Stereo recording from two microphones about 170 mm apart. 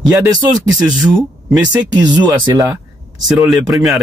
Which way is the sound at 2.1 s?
25° right (ahead or behind).